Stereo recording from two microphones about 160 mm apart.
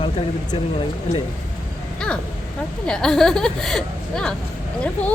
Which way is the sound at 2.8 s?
5° left (ahead or behind).